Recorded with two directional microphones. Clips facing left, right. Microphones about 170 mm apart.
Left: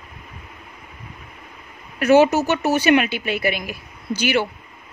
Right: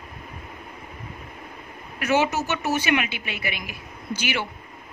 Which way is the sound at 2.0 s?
35° left (ahead or behind).